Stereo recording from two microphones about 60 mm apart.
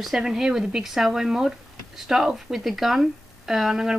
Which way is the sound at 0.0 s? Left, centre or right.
Centre.